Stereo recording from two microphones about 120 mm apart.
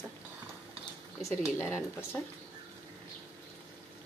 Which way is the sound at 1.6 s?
20° left (ahead or behind).